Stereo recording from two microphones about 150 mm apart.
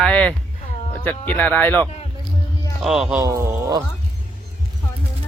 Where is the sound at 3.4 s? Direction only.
20° right (ahead or behind).